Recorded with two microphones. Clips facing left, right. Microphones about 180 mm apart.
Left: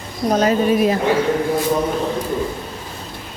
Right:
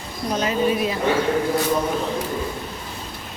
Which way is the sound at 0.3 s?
45° left (ahead or behind).